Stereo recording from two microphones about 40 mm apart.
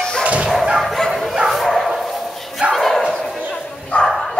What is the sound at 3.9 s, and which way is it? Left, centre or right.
Bow-wow, left.